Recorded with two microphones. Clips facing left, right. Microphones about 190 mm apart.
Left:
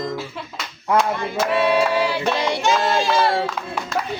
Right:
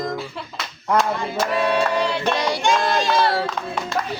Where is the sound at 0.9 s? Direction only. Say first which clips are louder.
Left 1 dB; centre (ahead or behind).